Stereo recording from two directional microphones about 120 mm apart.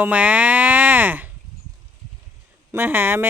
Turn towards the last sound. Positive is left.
turn(degrees=-15)  # may be behind; listen again after turning